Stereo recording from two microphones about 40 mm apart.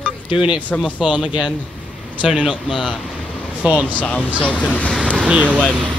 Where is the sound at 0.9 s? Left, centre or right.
Right.